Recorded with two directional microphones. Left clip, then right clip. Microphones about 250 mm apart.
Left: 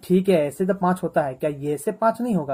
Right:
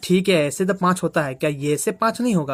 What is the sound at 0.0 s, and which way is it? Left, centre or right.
Speech, right.